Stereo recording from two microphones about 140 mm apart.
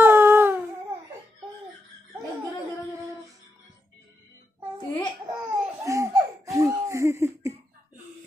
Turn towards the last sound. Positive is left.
turn(degrees=-20)  # may be behind; listen again after turning